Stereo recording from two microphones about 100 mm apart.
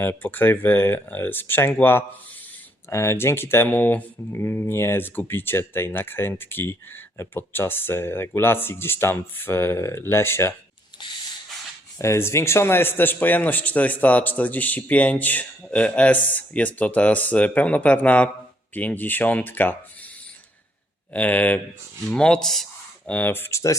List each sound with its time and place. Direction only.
0.0 s speech: 20° left (ahead or behind)
11.9 s speech: 30° left (ahead or behind)
21.1 s speech: 15° left (ahead or behind)
23.0 s speech: 20° left (ahead or behind)